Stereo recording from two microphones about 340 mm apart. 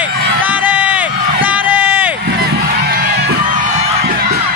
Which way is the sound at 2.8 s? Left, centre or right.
Right.